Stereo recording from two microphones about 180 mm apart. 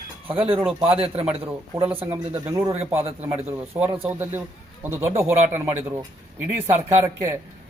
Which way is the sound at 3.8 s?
30° right (ahead or behind).